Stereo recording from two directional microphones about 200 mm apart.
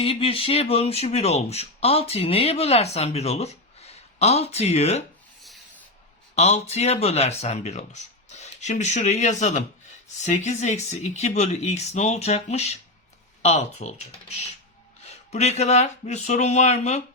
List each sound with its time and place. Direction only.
0.0 s speech: 30° left (ahead or behind)
6.3 s speech: 30° left (ahead or behind)